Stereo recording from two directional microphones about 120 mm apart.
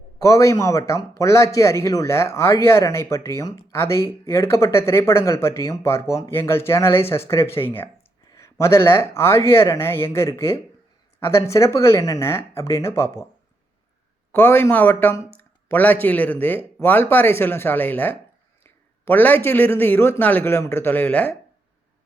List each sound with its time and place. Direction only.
0.2 s speech: 25° left (ahead or behind)
14.3 s a man's voice: 20° left (ahead or behind)